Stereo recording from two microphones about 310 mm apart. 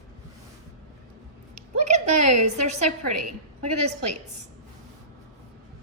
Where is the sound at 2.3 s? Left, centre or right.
Right.